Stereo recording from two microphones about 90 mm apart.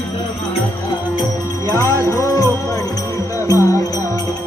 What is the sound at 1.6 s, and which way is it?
Music, 40° left (ahead or behind).